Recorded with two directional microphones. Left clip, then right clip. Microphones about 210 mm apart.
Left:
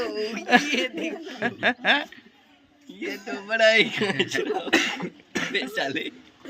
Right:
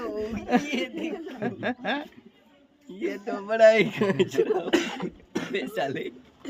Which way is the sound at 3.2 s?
55° right (ahead or behind).